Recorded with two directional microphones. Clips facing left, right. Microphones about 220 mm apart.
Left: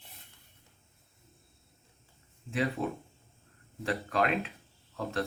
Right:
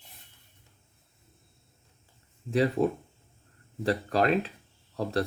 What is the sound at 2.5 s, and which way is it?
Speech, 40° right (ahead or behind).